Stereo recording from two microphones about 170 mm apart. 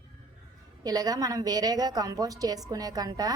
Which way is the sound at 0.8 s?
20° right (ahead or behind).